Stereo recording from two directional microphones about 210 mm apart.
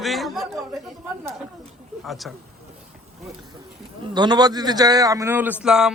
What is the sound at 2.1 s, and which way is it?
Speech, centre (ahead or behind).